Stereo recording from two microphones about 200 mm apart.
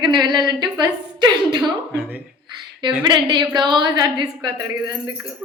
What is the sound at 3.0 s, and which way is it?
A woman's voice, 25° right (ahead or behind).